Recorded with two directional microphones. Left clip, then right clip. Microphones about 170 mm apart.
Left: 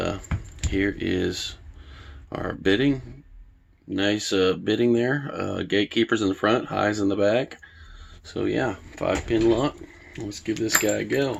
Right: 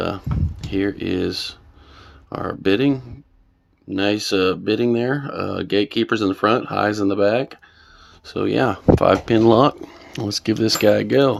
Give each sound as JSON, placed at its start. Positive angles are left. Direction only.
{"t": 0.7, "sound": "speech", "side_deg": -20}
{"t": 8.2, "sound": "speech", "side_deg": -30}
{"t": 9.0, "sound": "speech", "side_deg": -80}
{"t": 10.6, "sound": "speech", "side_deg": -80}